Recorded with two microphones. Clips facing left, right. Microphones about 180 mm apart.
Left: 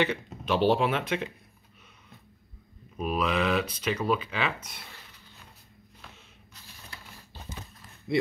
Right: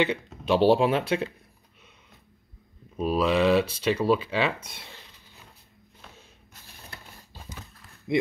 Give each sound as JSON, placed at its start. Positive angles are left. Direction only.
{"t": 0.5, "sound": "speech", "side_deg": -30}
{"t": 3.0, "sound": "speech", "side_deg": -30}
{"t": 8.1, "sound": "speech", "side_deg": -20}